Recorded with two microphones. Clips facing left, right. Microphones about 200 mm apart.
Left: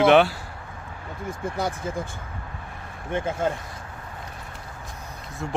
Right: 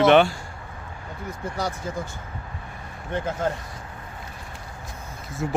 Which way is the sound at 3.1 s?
10° left (ahead or behind).